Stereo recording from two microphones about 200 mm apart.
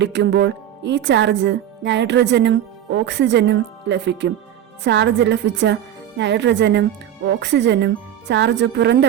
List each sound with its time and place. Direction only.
0.0 s speech: 60° right (ahead or behind)